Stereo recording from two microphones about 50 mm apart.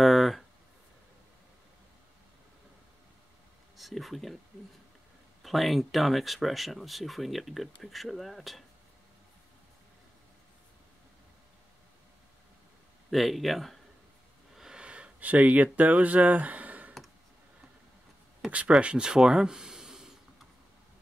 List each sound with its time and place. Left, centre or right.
0.0 s a sound: centre
3.7 s speech: centre
5.4 s speech: centre
13.1 s speech: centre
14.6 s wheeze: centre
14.9 s speech: right
18.5 s speech: right